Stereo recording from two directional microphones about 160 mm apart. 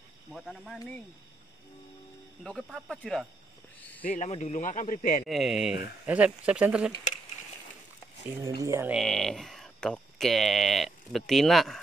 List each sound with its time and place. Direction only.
0.3 s speech: centre (ahead or behind)
2.4 s speech: centre (ahead or behind)
4.0 s speech: 60° left (ahead or behind)
4.3 s speech: 45° left (ahead or behind)
5.2 s speech: centre (ahead or behind)
8.4 s speech: 20° right (ahead or behind)
8.9 s speech: 5° left (ahead or behind)